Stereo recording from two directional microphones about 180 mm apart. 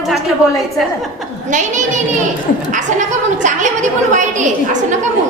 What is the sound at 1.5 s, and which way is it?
A woman's voice, 45° right (ahead or behind).